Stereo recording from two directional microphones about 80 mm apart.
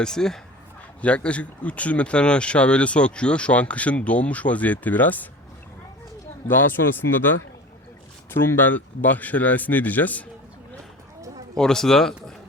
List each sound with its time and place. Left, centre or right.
0.0 s speech: centre
6.5 s speech: left
11.5 s speech: centre